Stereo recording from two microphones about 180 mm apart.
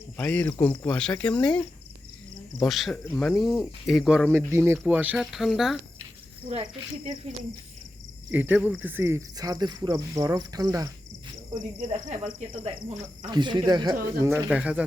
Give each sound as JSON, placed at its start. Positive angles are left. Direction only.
{"t": 0.2, "sound": "speech", "side_deg": 10}
{"t": 2.6, "sound": "speech", "side_deg": 0}
{"t": 4.3, "sound": "speech", "side_deg": -15}
{"t": 6.5, "sound": "speech", "side_deg": -35}
{"t": 8.3, "sound": "speech", "side_deg": -10}